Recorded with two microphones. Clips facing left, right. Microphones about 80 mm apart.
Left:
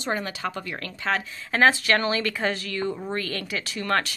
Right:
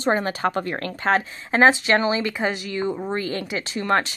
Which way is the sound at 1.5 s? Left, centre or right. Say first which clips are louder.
Right 3 dB; right.